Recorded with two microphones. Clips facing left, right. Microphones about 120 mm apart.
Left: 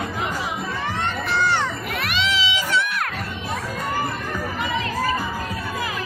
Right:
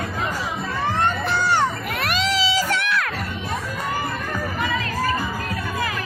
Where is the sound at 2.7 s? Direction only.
90° right.